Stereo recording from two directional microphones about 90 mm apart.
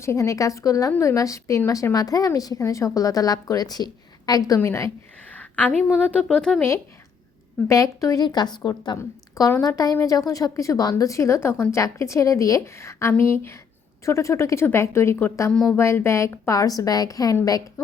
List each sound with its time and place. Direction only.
0.0 s a woman's voice: 30° left (ahead or behind)
4.6 s a woman's voice: 30° left (ahead or behind)
5.4 s a sound: 15° left (ahead or behind)
6.2 s speech: 5° left (ahead or behind)
7.7 s a woman's voice: 40° left (ahead or behind)
8.2 s a woman's voice: 50° left (ahead or behind)
9.0 s a woman's voice: 35° left (ahead or behind)
9.6 s a woman's voice: 45° left (ahead or behind)
16.5 s a woman's voice: 40° left (ahead or behind)